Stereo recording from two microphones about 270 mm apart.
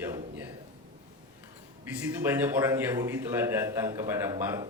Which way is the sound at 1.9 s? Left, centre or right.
Centre.